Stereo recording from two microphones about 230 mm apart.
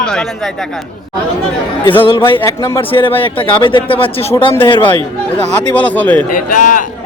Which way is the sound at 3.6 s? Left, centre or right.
Left.